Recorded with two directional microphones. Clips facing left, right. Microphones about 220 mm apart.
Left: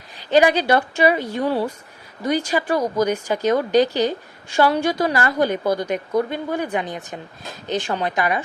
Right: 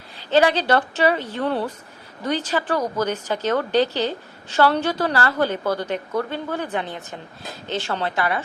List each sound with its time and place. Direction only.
0.2 s a woman's voice: 15° left (ahead or behind)